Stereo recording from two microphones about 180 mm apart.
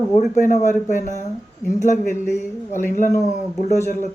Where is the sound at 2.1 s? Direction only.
15° left (ahead or behind).